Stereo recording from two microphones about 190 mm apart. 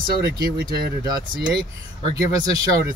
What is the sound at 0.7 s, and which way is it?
Speech, 20° right (ahead or behind).